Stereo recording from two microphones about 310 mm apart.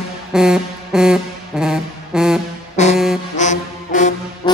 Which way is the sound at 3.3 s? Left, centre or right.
Left.